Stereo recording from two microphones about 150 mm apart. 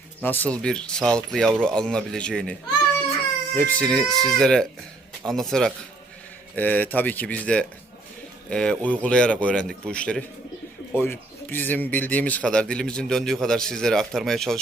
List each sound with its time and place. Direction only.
0.2 s a man's voice: 10° left (ahead or behind)